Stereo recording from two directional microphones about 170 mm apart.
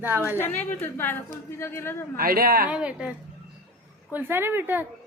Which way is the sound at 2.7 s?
5° right (ahead or behind).